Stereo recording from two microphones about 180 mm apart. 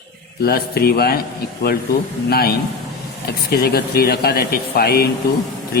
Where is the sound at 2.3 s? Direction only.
55° left (ahead or behind).